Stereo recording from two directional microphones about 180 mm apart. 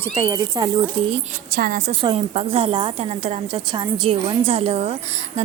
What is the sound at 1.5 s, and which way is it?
Speech, 50° right (ahead or behind).